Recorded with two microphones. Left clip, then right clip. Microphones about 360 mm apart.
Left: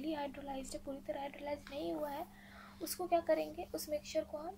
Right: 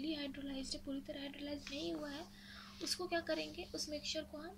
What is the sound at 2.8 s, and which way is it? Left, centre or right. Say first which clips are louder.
A woman's voice: left 5 dB; centre.